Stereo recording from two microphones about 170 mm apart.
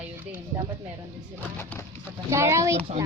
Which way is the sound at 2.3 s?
15° right (ahead or behind).